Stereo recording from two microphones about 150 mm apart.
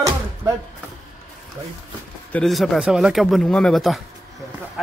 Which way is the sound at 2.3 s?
Centre (ahead or behind).